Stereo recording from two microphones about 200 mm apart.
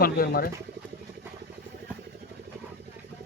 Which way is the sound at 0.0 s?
50° left (ahead or behind).